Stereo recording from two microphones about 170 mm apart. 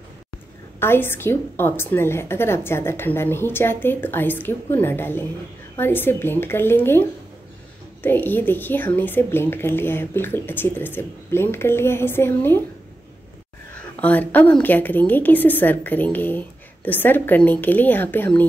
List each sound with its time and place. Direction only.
0.7 s a woman's voice: 15° left (ahead or behind)
13.7 s a woman's voice: 10° left (ahead or behind)